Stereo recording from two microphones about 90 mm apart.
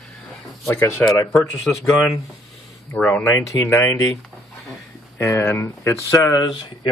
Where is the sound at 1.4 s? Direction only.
Centre (ahead or behind).